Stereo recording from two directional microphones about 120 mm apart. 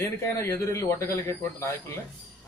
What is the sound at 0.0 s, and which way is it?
Speech, 20° left (ahead or behind).